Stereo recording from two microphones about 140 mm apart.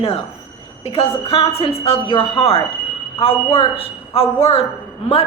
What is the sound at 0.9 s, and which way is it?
A woman's voice, 40° left (ahead or behind).